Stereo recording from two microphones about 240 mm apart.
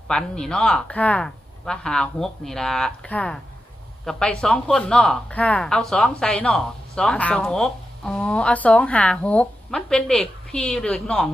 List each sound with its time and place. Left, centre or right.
0.1 s speech: centre